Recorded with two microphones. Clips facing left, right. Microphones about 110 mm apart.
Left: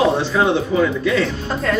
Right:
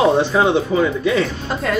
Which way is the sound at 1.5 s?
5° right (ahead or behind).